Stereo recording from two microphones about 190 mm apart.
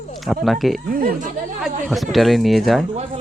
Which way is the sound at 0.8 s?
50° right (ahead or behind).